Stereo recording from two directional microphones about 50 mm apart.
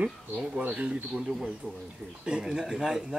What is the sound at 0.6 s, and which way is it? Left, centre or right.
Speech, right.